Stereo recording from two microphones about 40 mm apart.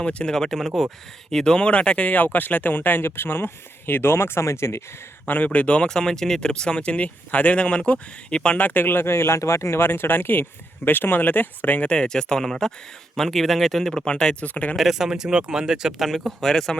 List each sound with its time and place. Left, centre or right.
0.0 s speech: left
0.3 s speech: centre
1.5 s speech: left
2.1 s speech: left
3.0 s speech: left
5.2 s speech: left
8.5 s speech: left
11.9 s speech: left
14.4 s speech: left
14.9 s speech: centre
16.0 s speech: centre